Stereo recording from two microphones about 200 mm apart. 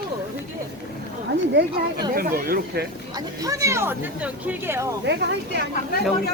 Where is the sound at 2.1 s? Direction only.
45° right (ahead or behind).